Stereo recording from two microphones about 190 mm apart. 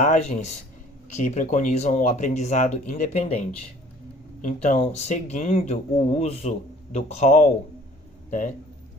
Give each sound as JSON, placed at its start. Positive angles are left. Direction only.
{"t": 0.0, "sound": "a man's voice", "side_deg": 40}